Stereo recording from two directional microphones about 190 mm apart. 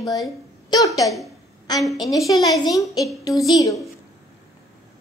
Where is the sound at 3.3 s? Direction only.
Centre (ahead or behind).